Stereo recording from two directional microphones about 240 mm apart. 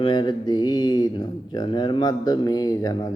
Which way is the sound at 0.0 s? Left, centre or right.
Centre.